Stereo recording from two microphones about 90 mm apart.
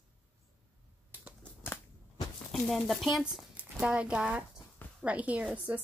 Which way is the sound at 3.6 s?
10° right (ahead or behind).